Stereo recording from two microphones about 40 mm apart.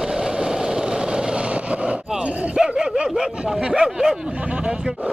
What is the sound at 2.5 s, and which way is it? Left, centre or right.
Dog, centre.